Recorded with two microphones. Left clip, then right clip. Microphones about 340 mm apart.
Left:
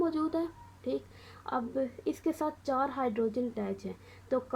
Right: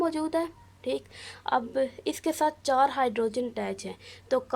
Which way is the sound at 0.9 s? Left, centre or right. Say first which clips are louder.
Right 4 dB; right.